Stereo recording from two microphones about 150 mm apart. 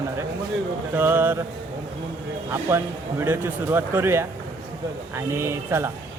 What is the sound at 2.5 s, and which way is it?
Speech, 15° right (ahead or behind).